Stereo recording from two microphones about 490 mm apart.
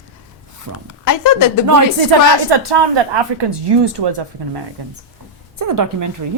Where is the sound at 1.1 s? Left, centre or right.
Left.